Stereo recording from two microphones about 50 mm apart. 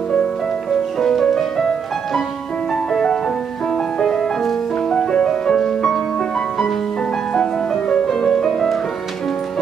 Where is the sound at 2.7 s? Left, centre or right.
Centre.